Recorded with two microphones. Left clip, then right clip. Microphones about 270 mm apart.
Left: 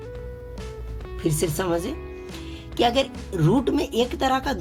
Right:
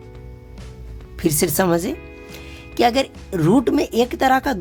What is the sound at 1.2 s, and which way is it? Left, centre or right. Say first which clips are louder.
Speech: right 6 dB; right.